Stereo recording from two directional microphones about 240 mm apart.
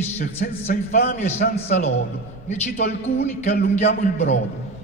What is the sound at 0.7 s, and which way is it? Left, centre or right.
A man's voice, left.